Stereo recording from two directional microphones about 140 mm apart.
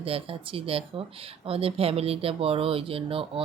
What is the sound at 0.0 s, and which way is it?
Speech, 40° right (ahead or behind).